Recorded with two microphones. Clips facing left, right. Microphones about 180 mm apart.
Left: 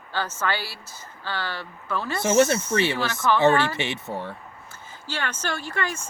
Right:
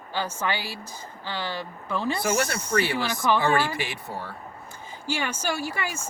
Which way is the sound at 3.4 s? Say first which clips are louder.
Left 4 dB; 25° left (ahead or behind).